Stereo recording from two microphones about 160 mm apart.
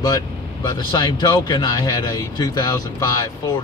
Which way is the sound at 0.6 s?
25° left (ahead or behind).